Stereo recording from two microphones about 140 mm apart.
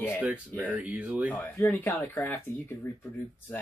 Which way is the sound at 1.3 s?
15° left (ahead or behind).